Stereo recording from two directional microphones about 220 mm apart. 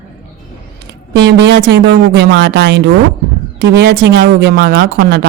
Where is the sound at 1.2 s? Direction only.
50° right (ahead or behind).